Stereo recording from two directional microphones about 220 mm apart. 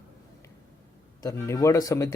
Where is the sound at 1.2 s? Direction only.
15° left (ahead or behind).